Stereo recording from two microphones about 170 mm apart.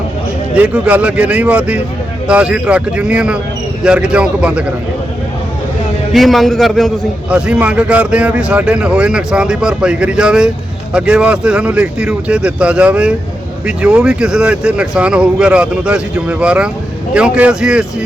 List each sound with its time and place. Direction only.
0.5 s speech: 10° right (ahead or behind)
6.1 s a man's voice: centre (ahead or behind)